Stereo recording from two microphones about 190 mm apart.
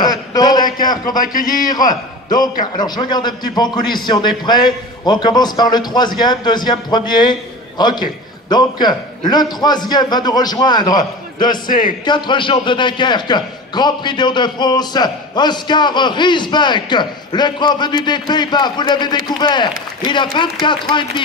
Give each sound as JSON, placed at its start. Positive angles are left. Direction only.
{"t": 0.0, "sound": "a sound", "side_deg": 20}
{"t": 1.0, "sound": "speech", "side_deg": 45}
{"t": 2.2, "sound": "a man's voice", "side_deg": 20}